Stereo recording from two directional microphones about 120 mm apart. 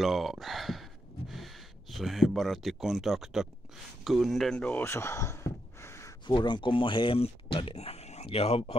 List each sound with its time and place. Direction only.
0.0 s speech: centre (ahead or behind); by 6.1 s 25° left (ahead or behind)
6.2 s speech: 40° left (ahead or behind)